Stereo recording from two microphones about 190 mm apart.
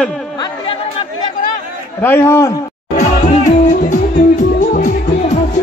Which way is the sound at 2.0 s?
10° left (ahead or behind).